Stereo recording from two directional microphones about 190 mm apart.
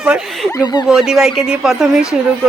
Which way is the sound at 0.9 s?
5° right (ahead or behind).